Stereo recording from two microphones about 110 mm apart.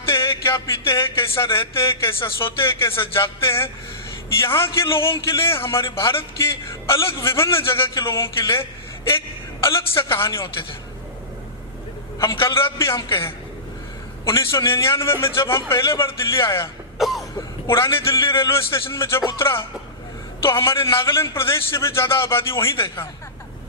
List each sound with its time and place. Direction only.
0.1 s a sound: 25° left (ahead or behind)
2.6 s a man's voice: 25° left (ahead or behind)
5.0 s speech: 50° left (ahead or behind)
5.4 s a man's voice: 25° left (ahead or behind)
9.6 s a man's voice: 25° left (ahead or behind)
12.2 s a man's voice: 25° left (ahead or behind)
14.3 s a man's voice: 25° left (ahead or behind)
17.0 s cough: centre (ahead or behind)
17.7 s a man's voice: 25° left (ahead or behind)